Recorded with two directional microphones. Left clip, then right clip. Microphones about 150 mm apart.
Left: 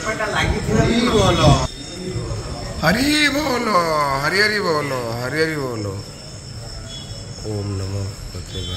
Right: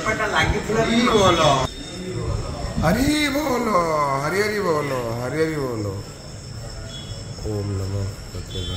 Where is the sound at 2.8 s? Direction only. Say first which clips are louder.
Left 4 dB; 5° right (ahead or behind).